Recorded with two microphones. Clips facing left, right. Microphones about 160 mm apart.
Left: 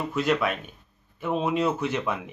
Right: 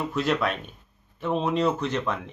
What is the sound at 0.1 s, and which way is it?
A man's voice, centre (ahead or behind).